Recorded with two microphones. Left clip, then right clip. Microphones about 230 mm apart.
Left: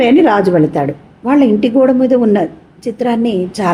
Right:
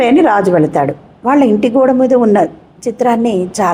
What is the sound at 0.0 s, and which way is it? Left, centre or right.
A woman's voice, centre.